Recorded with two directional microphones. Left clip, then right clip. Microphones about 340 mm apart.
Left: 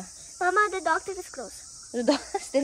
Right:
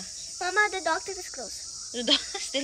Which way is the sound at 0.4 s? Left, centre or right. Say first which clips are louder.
Left 2 dB; centre.